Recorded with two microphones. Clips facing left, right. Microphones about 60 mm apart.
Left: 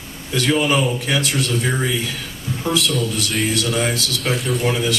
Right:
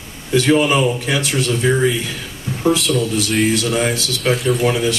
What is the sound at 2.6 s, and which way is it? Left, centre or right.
Speech, centre.